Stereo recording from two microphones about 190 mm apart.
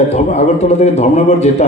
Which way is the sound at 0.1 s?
35° left (ahead or behind).